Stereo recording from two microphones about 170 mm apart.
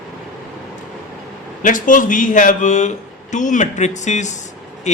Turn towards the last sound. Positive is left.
turn(degrees=45)  # may be behind; listen again after turning